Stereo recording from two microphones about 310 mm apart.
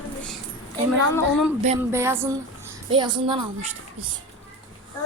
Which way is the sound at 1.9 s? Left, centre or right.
Centre.